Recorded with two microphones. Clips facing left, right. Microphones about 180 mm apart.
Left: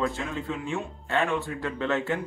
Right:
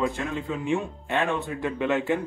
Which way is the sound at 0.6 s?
15° right (ahead or behind).